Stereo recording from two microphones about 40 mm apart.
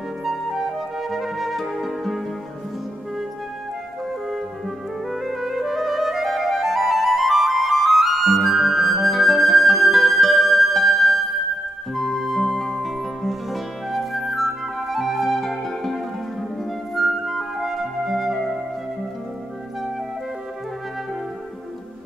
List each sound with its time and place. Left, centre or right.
0.5 s music: centre
5.1 s music: centre